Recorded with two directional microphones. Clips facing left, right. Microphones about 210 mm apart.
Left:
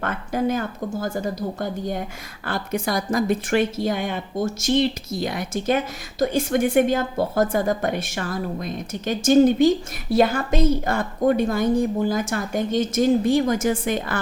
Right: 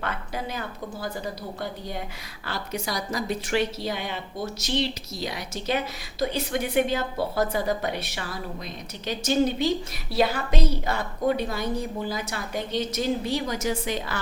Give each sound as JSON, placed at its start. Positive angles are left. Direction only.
{"t": 0.0, "sound": "a woman's voice", "side_deg": 50}